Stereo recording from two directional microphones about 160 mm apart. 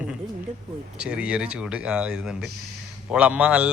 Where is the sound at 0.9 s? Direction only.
5° right (ahead or behind).